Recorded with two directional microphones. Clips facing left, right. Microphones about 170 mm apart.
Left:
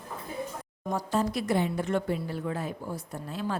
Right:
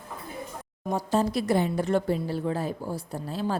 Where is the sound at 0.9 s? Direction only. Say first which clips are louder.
Right 3 dB; 30° right (ahead or behind).